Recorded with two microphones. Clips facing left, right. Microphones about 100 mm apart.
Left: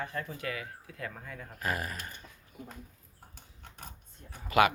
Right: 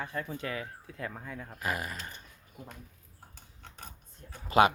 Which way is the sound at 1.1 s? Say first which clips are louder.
Right 2 dB; 10° right (ahead or behind).